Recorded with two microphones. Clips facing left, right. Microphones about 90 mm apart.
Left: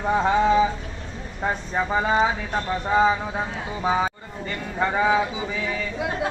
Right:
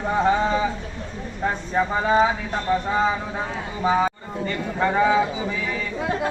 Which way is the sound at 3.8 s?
5° left (ahead or behind).